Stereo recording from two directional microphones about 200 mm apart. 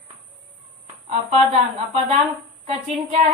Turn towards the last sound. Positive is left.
turn(degrees=-30)  # may be behind; listen again after turning